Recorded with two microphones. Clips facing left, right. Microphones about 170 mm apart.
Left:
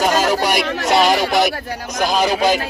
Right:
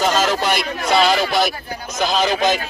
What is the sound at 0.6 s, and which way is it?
Speech, 80° left.